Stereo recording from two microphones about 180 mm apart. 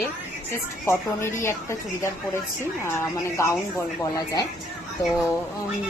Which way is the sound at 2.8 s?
15° left (ahead or behind).